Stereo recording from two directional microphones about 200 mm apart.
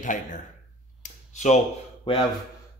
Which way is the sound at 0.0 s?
40° left (ahead or behind).